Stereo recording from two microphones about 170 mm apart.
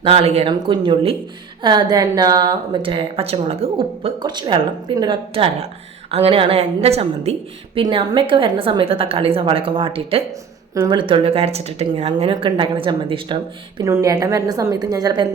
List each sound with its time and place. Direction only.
0.0 s a woman's voice: 35° right (ahead or behind)
7.8 s a woman's voice: 25° right (ahead or behind)
13.8 s a woman's voice: 20° right (ahead or behind)